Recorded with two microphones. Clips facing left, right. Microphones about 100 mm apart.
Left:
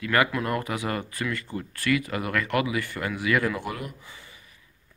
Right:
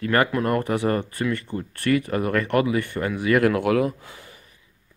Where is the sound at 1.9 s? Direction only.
40° right (ahead or behind).